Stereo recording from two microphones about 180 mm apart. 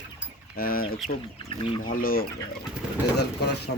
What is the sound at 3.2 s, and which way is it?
Speech, 65° left (ahead or behind).